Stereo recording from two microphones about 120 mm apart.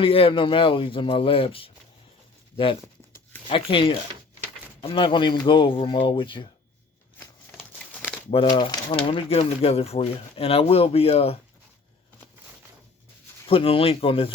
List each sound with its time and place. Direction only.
0.0 s speech: 50° left (ahead or behind)
3.5 s speech: 50° left (ahead or behind)
8.3 s speech: 45° left (ahead or behind)
9.0 s speech: 55° left (ahead or behind)
13.5 s speech: 50° left (ahead or behind)